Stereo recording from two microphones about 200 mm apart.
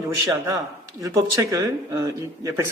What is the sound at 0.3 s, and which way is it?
Speech, 15° right (ahead or behind).